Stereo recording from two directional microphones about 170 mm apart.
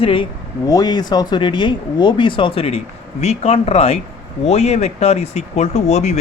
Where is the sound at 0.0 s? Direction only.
30° left (ahead or behind).